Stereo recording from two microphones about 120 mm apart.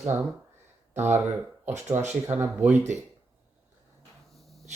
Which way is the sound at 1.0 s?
20° right (ahead or behind).